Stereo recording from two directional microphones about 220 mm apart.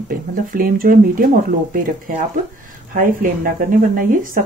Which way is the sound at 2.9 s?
40° right (ahead or behind).